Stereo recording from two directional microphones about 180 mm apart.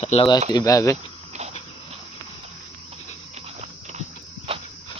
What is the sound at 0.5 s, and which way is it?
Speech, 20° left (ahead or behind).